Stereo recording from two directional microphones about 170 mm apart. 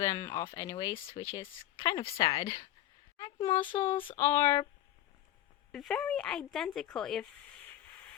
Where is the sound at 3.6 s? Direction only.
30° left (ahead or behind).